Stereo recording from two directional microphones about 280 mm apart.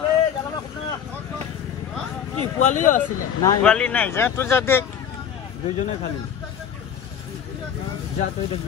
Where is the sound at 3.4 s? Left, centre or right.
Centre.